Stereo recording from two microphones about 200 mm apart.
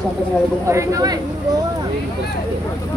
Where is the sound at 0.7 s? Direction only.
15° right (ahead or behind).